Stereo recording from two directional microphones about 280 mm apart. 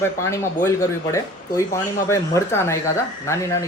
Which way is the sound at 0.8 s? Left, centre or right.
Centre.